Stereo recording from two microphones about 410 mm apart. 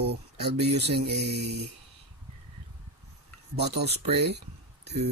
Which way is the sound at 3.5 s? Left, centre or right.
Right.